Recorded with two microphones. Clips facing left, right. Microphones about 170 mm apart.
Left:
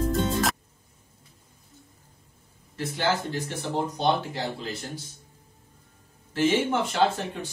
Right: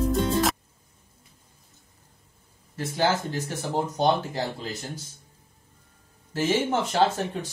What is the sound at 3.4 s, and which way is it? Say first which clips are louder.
Speech: right 2 dB; 45° right (ahead or behind).